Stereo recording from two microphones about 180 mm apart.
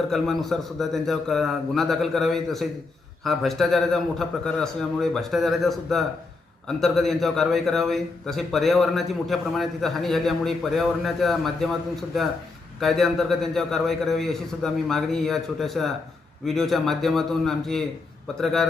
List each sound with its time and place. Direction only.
0.1 s a man's voice: centre (ahead or behind)
12.8 s a man's voice: centre (ahead or behind)